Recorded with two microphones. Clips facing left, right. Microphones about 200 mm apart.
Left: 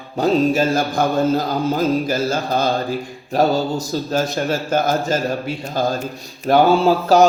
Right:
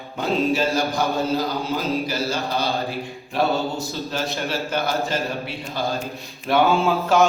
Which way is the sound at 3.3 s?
40° left (ahead or behind).